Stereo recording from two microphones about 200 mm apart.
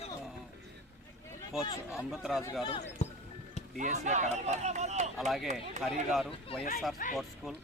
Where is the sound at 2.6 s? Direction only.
30° left (ahead or behind).